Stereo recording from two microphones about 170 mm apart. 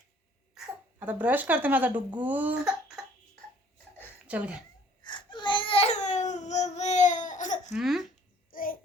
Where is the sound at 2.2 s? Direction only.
10° right (ahead or behind).